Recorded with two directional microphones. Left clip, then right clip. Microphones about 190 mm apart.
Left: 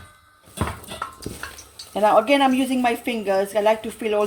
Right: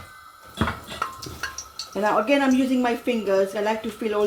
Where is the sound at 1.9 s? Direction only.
35° left (ahead or behind).